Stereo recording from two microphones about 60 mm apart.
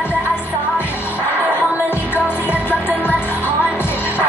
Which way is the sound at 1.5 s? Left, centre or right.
Left.